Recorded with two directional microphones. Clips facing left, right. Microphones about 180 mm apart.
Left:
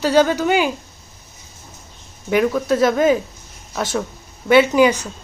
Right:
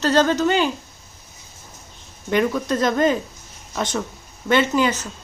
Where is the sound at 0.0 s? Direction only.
10° left (ahead or behind).